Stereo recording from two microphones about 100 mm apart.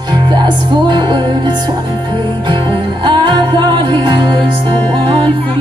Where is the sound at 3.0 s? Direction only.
50° right (ahead or behind).